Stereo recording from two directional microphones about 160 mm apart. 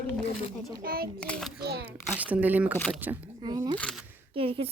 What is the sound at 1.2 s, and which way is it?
Speech, 5° left (ahead or behind).